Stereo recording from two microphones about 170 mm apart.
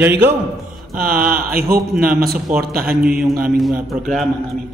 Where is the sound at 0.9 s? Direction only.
55° right (ahead or behind).